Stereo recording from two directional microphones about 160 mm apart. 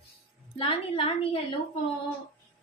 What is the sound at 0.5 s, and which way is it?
Speech, 35° left (ahead or behind).